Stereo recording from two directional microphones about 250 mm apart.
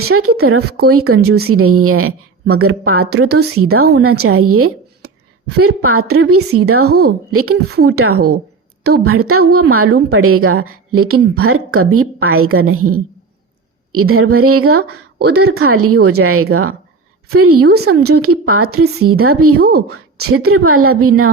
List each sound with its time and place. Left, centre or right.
0.0 s a woman's voice: right
6.8 s a woman's voice: right
7.3 s a woman's voice: right